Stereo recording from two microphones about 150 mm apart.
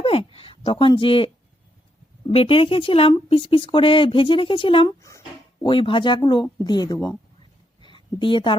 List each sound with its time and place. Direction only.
0.0 s speech: 40° left (ahead or behind)
2.3 s speech: 40° left (ahead or behind)
4.9 s a child's voice: 20° left (ahead or behind)
5.6 s speech: 35° left (ahead or behind)
7.8 s a sound: 35° left (ahead or behind)